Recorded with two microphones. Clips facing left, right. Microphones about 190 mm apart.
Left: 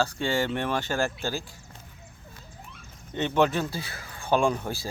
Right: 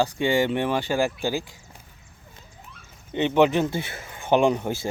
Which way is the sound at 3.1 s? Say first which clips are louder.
Right 4 dB; 15° right (ahead or behind).